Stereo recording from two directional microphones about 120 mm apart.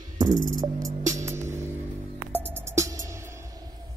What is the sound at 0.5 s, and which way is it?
Music, 30° right (ahead or behind).